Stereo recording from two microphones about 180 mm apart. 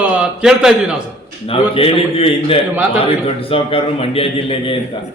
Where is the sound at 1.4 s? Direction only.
30° left (ahead or behind).